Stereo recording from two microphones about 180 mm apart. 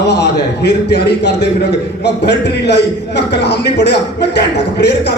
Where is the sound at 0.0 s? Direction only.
70° left (ahead or behind).